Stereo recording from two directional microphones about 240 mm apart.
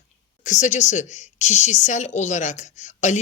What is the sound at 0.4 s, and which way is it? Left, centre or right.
A woman's voice, left.